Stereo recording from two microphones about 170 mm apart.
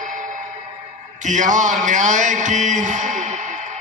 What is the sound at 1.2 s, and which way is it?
A man's voice, 45° right (ahead or behind).